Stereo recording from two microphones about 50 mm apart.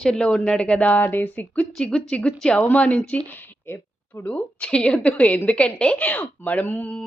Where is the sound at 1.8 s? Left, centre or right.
Centre.